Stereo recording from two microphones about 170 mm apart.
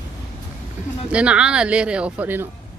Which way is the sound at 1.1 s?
5° right (ahead or behind).